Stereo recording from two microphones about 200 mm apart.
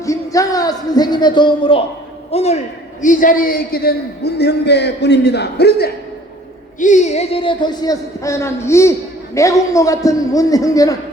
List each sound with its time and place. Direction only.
0.0 s a man's voice: 15° left (ahead or behind); by 5.9 s 55° left (ahead or behind)
6.7 s a man's voice: 40° left (ahead or behind); by 10.9 s 15° left (ahead or behind)